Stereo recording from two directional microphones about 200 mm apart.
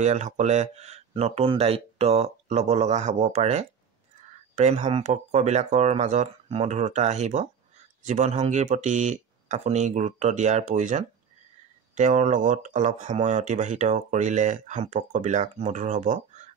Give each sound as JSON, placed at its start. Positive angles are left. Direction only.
{"t": 0.0, "sound": "speech", "side_deg": -35}